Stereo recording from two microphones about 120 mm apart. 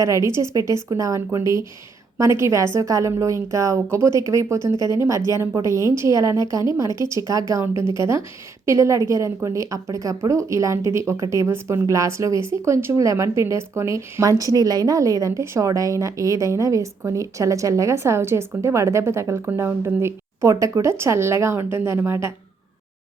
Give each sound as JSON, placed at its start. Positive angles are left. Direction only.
{"t": 0.0, "sound": "a woman's voice", "side_deg": -25}